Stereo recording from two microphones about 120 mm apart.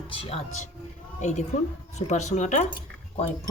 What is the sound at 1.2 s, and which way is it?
A woman's voice, 75° left (ahead or behind).